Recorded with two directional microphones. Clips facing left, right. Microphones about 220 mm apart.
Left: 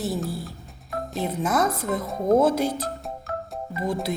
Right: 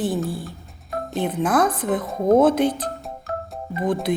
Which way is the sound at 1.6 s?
25° left (ahead or behind).